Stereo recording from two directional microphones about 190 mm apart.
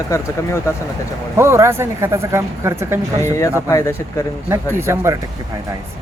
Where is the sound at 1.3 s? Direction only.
15° right (ahead or behind).